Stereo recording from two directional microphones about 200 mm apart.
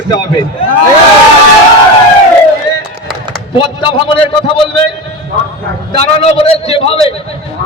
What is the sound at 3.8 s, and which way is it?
Speech, 25° left (ahead or behind).